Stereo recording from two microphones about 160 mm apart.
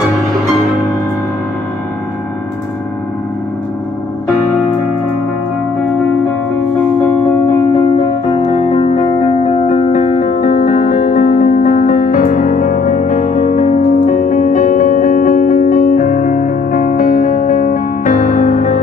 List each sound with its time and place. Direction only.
8.5 s music: 40° left (ahead or behind)
9.5 s music: 55° left (ahead or behind)